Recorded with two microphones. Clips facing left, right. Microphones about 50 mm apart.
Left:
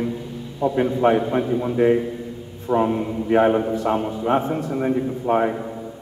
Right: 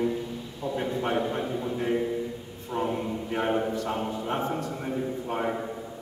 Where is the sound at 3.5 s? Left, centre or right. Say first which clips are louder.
Left 7 dB; centre; by 5.4 s left.